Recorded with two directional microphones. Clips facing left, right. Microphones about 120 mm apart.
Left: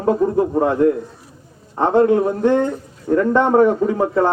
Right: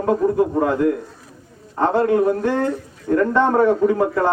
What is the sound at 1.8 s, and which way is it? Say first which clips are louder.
A man's voice: left 2 dB; 20° left (ahead or behind).